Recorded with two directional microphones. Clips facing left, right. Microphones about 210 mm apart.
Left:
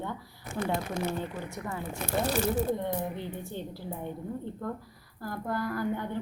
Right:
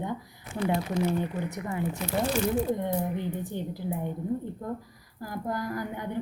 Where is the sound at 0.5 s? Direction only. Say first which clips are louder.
Right 3 dB; 45° left (ahead or behind).